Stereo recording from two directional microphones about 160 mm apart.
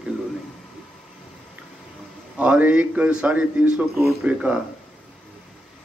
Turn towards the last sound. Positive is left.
turn(degrees=-10)  # may be behind; listen again after turning